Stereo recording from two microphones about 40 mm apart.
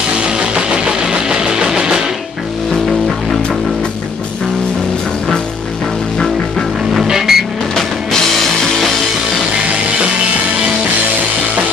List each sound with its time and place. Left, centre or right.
0.2 s music: right
6.9 s vehicle: centre